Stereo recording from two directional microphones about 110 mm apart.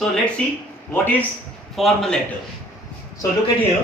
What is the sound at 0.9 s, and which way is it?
Speech, 15° left (ahead or behind).